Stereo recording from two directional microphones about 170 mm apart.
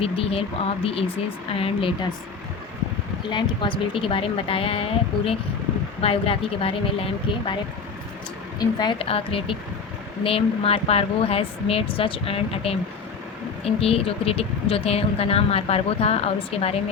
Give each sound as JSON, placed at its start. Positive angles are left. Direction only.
{"t": 0.0, "sound": "speech", "side_deg": 35}
{"t": 3.2, "sound": "speech", "side_deg": 30}